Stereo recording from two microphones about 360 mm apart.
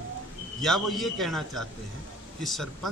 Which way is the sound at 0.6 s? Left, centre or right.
Centre.